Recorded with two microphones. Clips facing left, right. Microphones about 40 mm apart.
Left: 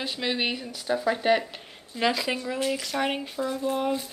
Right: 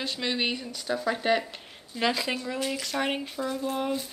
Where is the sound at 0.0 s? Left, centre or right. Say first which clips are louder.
Left 1 dB; centre.